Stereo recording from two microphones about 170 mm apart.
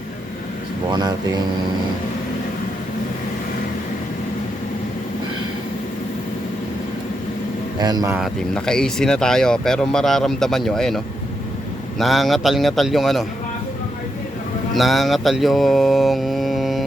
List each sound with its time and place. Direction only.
7.8 s speech: 25° right (ahead or behind)
8.1 s speech: centre (ahead or behind)
14.7 s speech: centre (ahead or behind)